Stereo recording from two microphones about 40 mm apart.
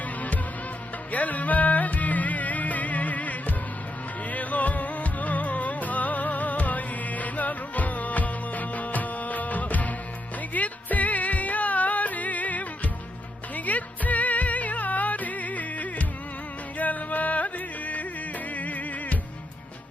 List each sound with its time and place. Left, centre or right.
1.1 s music: left